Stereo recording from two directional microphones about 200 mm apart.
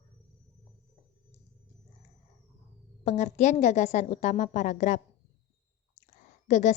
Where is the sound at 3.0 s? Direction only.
35° left (ahead or behind).